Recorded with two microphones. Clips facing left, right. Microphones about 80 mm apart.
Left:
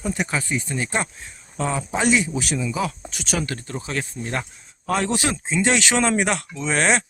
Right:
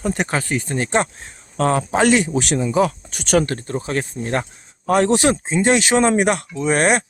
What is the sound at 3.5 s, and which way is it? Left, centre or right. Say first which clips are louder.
Speech: right 6 dB; right.